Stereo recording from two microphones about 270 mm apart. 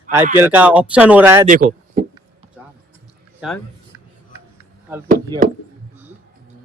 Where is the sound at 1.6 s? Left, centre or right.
Right.